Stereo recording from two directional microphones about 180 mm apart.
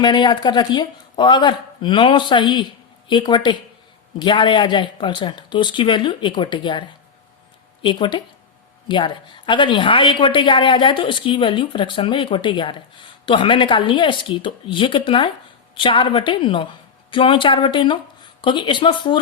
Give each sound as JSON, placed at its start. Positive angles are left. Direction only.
{"t": 0.0, "sound": "a woman's voice", "side_deg": 25}